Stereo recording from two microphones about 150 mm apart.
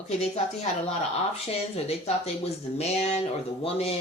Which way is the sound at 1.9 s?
40° left (ahead or behind).